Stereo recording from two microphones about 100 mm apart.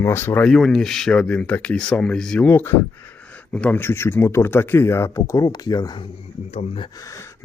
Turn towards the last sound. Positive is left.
turn(degrees=30)  # may be behind; listen again after turning